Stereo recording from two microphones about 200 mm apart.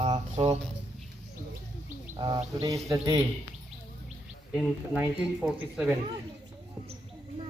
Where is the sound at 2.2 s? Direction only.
20° right (ahead or behind).